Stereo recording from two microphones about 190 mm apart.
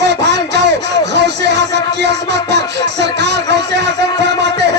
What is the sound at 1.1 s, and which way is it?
Music, 65° right (ahead or behind).